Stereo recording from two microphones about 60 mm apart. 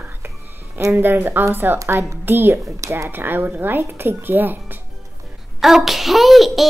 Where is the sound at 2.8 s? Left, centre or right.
Right.